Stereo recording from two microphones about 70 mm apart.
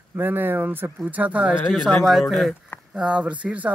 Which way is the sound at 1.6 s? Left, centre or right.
Centre.